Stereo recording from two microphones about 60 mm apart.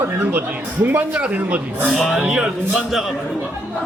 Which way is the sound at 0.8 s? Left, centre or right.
Right.